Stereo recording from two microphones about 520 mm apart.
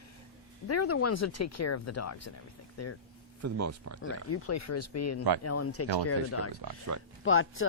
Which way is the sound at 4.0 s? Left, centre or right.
Left.